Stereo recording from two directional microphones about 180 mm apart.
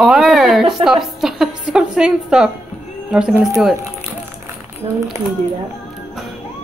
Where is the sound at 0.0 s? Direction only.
Centre (ahead or behind).